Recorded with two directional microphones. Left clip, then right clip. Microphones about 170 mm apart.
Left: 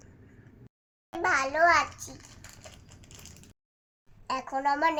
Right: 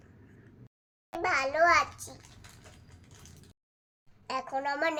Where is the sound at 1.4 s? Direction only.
15° right (ahead or behind).